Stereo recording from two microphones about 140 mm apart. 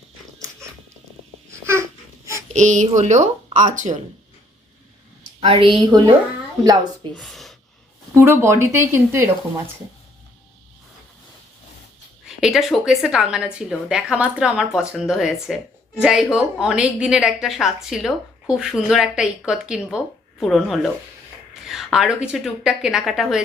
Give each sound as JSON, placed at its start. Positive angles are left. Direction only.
{"t": 1.6, "sound": "baby cry", "side_deg": -20}
{"t": 2.5, "sound": "speech", "side_deg": -60}
{"t": 5.4, "sound": "a woman's voice", "side_deg": -40}
{"t": 7.2, "sound": "speech", "side_deg": 0}
{"t": 8.1, "sound": "speech", "side_deg": -20}
{"t": 12.4, "sound": "a woman's voice", "side_deg": 0}